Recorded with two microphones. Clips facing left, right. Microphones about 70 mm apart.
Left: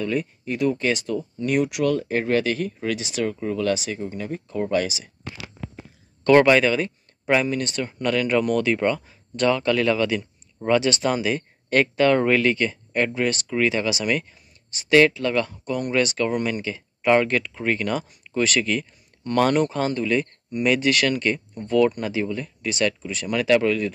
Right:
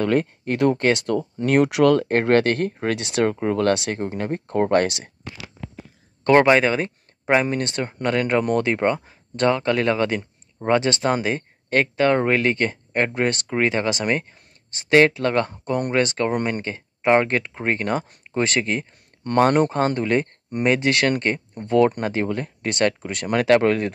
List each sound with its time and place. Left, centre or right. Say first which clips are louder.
0.0 s speech: right 5 dB; right
6.2 s speech: even; right
7.4 s speech: right 1 dB; right
12.5 s speech: right 1 dB; right
15.1 s speech: right 2 dB; right
17.0 s speech: right 1 dB; right